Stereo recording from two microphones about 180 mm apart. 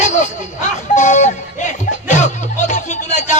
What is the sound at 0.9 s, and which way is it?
Music, 40° left (ahead or behind).